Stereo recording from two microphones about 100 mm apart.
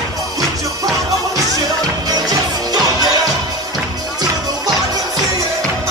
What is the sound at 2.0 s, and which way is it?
Music, 40° right (ahead or behind).